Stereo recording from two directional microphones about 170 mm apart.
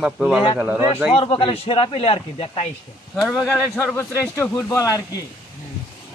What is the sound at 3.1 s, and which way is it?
Speech, centre (ahead or behind).